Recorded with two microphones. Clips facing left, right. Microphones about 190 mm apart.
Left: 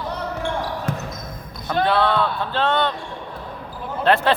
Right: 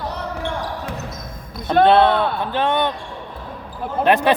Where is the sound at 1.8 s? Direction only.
20° right (ahead or behind).